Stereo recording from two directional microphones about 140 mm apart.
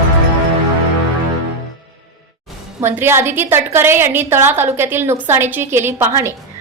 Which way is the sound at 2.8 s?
15° right (ahead or behind).